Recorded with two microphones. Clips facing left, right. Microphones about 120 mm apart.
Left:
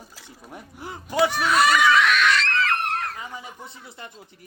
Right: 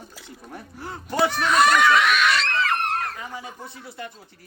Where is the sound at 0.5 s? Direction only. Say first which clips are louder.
Right 1 dB; 15° left (ahead or behind).